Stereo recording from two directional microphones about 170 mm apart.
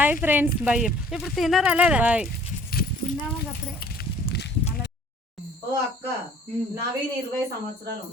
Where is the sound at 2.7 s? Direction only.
60° left (ahead or behind).